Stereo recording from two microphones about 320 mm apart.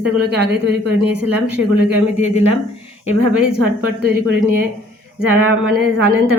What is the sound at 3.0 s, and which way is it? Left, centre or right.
Speech, centre.